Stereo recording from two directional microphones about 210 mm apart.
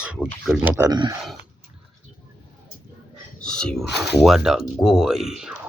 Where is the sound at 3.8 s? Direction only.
55° left (ahead or behind).